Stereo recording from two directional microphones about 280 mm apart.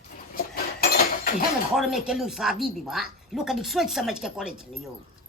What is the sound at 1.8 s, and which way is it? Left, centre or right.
Speech, centre.